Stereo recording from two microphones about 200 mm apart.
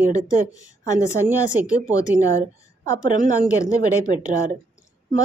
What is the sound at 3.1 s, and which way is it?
Speech, 40° right (ahead or behind).